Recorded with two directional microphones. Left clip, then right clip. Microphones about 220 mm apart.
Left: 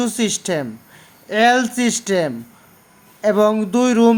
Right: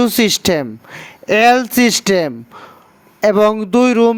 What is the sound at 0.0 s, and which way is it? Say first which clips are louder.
Speech: right 8 dB; 40° right (ahead or behind).